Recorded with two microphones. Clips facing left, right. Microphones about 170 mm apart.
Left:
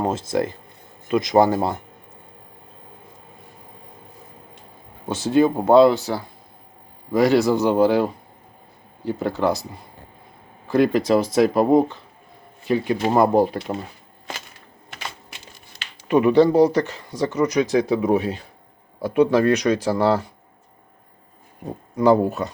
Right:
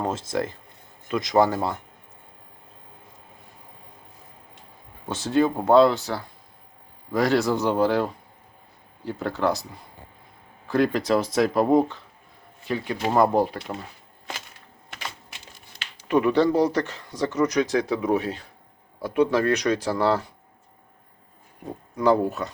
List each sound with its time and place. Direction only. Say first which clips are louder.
0.0 s speech: left 4 dB; 15° left (ahead or behind)
5.0 s speech: left 4 dB; 10° left (ahead or behind)
10.7 s speech: left 4 dB; 10° left (ahead or behind)
16.0 s speech: left 5 dB; 15° left (ahead or behind)
21.9 s speech: left 4 dB; 15° left (ahead or behind)